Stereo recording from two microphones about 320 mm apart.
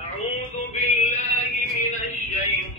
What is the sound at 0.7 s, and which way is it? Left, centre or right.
Music, left.